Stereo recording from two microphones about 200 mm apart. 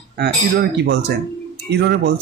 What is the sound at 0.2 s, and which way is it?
Speech, 55° right (ahead or behind).